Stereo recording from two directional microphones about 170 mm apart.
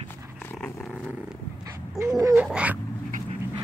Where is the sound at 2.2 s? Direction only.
20° right (ahead or behind).